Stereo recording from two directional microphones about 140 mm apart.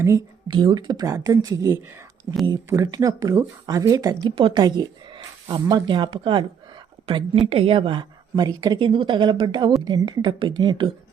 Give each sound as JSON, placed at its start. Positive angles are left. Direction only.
{"t": 0.0, "sound": "speech", "side_deg": -25}